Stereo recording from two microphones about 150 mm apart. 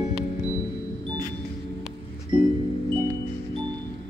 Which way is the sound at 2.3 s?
35° right (ahead or behind).